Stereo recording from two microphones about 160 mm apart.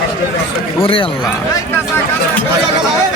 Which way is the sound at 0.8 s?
35° left (ahead or behind).